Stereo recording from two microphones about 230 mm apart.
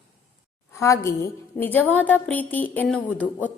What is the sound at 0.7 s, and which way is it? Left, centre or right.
A woman's voice, centre.